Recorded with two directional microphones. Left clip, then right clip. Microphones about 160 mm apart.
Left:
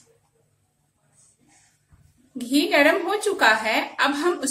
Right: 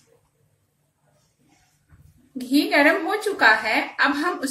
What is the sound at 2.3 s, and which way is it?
A woman's voice, 20° left (ahead or behind).